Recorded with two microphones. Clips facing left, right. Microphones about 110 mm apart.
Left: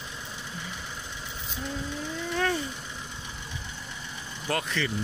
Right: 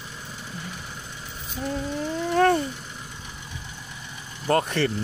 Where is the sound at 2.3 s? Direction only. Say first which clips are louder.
Right 9 dB; 50° right (ahead or behind).